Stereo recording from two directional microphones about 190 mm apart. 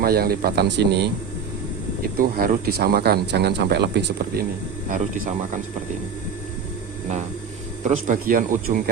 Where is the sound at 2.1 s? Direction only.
50° right (ahead or behind).